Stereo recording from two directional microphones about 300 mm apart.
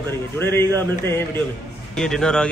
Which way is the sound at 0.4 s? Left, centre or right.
Centre.